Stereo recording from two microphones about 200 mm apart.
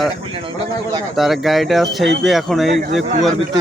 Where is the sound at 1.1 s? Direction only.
Centre (ahead or behind).